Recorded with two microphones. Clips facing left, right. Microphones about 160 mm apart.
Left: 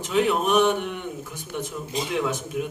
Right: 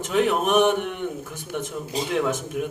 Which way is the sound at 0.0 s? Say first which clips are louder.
Right 1 dB; 50° right (ahead or behind).